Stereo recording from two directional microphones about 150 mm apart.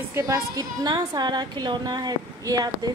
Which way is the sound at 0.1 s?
25° right (ahead or behind).